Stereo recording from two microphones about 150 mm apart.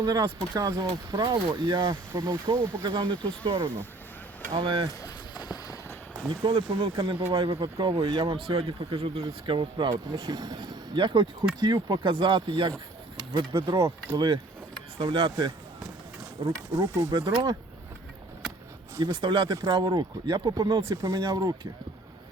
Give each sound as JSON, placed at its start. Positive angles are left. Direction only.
{"t": 0.0, "sound": "speech", "side_deg": -25}
{"t": 2.1, "sound": "speech", "side_deg": -20}
{"t": 2.8, "sound": "speech", "side_deg": -30}
{"t": 4.9, "sound": "a sound", "side_deg": 25}
{"t": 6.4, "sound": "speech", "side_deg": -35}
{"t": 7.3, "sound": "speech", "side_deg": -40}
{"t": 7.6, "sound": "speech", "side_deg": -25}
{"t": 8.4, "sound": "speech", "side_deg": -40}
{"t": 9.2, "sound": "speech", "side_deg": -30}
{"t": 13.1, "sound": "speech", "side_deg": -20}
{"t": 14.9, "sound": "speech", "side_deg": -35}
{"t": 19.1, "sound": "speech", "side_deg": -35}